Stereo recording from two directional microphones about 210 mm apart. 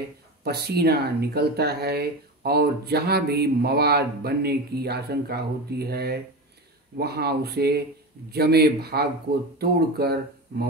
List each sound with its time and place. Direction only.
0.4 s speech: 50° right (ahead or behind)